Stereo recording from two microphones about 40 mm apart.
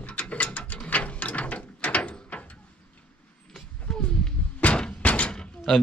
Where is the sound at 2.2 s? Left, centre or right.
Left.